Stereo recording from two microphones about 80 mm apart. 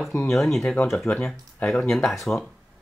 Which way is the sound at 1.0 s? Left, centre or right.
Centre.